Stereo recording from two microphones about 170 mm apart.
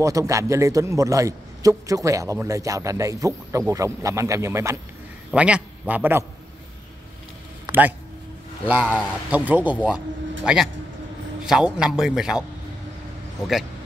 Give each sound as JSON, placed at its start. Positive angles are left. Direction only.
{"t": 0.0, "sound": "a man's voice", "side_deg": -20}
{"t": 7.7, "sound": "a sound", "side_deg": -25}
{"t": 8.6, "sound": "a man's voice", "side_deg": -10}